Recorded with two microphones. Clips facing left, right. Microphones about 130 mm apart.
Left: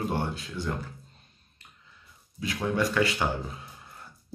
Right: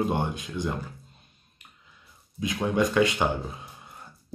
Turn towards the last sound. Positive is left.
turn(degrees=-20)  # may be behind; listen again after turning